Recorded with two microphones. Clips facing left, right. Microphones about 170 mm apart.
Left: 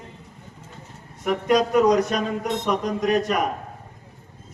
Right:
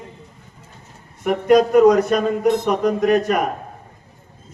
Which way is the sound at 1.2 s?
55° right (ahead or behind).